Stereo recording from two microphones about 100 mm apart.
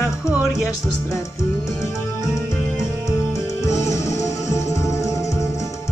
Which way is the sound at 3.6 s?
30° left (ahead or behind).